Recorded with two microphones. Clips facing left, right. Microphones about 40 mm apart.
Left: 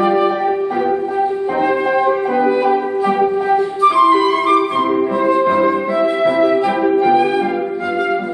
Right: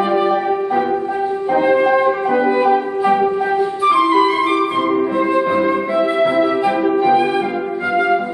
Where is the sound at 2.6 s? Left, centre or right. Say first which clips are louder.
Even; centre.